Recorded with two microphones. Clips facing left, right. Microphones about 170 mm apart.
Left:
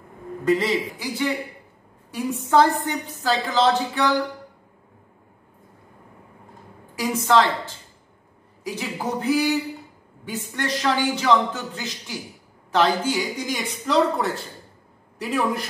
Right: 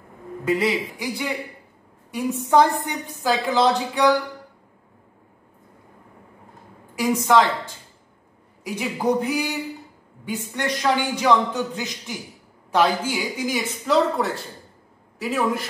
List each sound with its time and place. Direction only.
0.5 s a woman's voice: 10° right (ahead or behind)
7.0 s a woman's voice: 15° right (ahead or behind)